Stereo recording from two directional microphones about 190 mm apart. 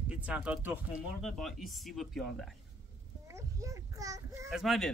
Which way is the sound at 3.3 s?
15° right (ahead or behind).